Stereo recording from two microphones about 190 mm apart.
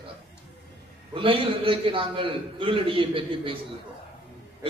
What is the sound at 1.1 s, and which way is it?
A man's voice, 25° right (ahead or behind).